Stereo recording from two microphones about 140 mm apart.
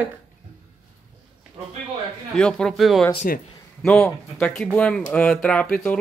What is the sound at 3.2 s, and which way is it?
Speech, 90° left.